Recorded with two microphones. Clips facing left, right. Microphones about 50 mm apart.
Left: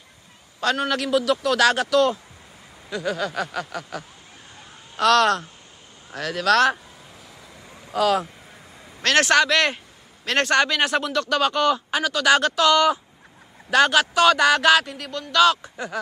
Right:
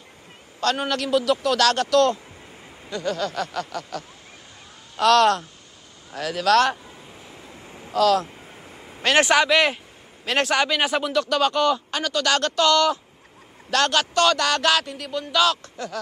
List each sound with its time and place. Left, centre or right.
0.8 s a man's voice: centre
7.2 s waves: right
7.9 s a man's voice: centre
8.6 s a man's voice: right; by 15.7 s centre